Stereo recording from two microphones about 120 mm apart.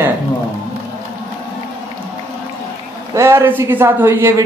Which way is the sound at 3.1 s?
25° right (ahead or behind).